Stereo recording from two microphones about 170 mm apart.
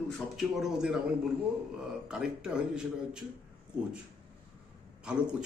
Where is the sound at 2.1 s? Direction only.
5° right (ahead or behind).